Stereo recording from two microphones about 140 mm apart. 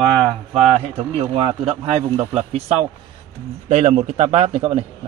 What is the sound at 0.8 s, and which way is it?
A man's voice, 45° right (ahead or behind).